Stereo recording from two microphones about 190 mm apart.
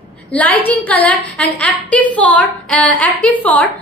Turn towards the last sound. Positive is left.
turn(degrees=5)  # may be behind; listen again after turning